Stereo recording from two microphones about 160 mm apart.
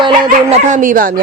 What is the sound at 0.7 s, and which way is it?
Speech, 55° right (ahead or behind).